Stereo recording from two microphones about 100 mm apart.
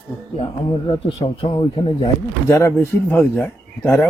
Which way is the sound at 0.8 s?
60° left (ahead or behind).